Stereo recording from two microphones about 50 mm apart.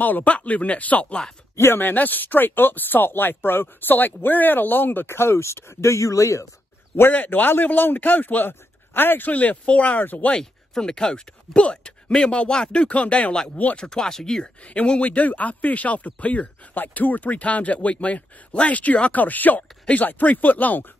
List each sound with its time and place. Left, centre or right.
0.0 s a man's voice: left
7.1 s a man's voice: left
9.3 s a man's voice: left
10.3 s speech: centre; by 13.4 s left
13.7 s speech: centre
14.4 s speech: left